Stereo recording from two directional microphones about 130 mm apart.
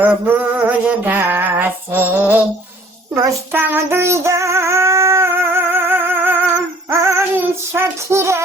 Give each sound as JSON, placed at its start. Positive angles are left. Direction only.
{"t": 0.0, "sound": "a sound", "side_deg": -15}
{"t": 3.5, "sound": "music", "side_deg": -15}
{"t": 6.9, "sound": "female singing", "side_deg": -20}